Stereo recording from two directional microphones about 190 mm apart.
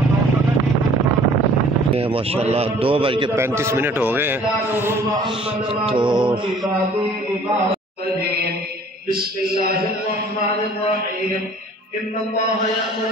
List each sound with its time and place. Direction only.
2.5 s a man's voice: 30° right (ahead or behind)
3.3 s a man's voice: 15° right (ahead or behind)
5.9 s a man's voice: 25° right (ahead or behind)
9.1 s a man's voice: 50° right (ahead or behind)